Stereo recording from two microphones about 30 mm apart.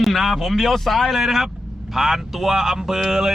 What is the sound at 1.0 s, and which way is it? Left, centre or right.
Speech, centre.